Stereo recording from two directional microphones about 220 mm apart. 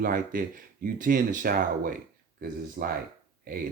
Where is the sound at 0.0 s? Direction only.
40° right (ahead or behind).